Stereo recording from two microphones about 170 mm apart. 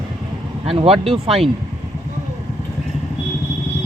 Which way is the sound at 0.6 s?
35° right (ahead or behind).